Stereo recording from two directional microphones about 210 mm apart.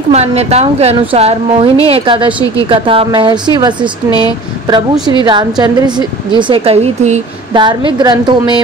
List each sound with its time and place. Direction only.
0.1 s a woman's voice: 30° right (ahead or behind)